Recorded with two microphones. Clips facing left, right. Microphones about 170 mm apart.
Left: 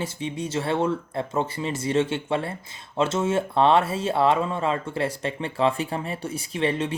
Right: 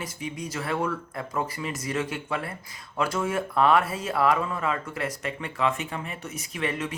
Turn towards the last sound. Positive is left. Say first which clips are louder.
# left 5 dB
turn(degrees=30)  # may be behind; listen again after turning